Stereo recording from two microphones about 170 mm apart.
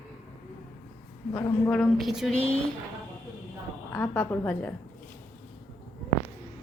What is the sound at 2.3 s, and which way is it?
Speech, 35° left (ahead or behind).